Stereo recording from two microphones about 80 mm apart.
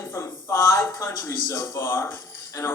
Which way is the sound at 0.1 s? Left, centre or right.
Left.